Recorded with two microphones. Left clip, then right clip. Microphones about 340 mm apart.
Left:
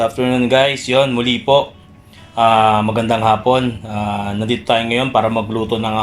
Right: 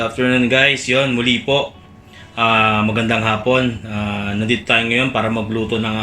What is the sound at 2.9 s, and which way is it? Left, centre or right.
Speech, centre.